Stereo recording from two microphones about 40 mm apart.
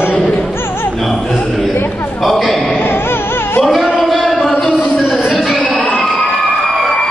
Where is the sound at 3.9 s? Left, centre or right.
Centre.